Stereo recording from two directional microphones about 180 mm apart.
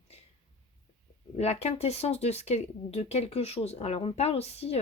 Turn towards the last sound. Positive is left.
turn(degrees=35)  # may be behind; listen again after turning